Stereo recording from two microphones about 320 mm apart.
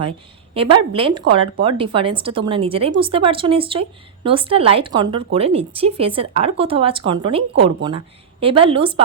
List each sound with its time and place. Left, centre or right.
0.5 s speech: centre